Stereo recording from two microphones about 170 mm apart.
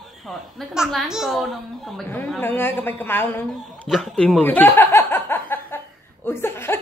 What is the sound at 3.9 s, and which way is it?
Chuckle, centre (ahead or behind).